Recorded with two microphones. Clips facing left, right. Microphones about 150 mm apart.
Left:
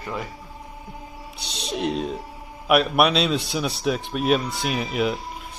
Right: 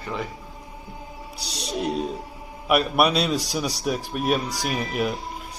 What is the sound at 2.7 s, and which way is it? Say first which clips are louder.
Speech: left 2 dB; centre (ahead or behind).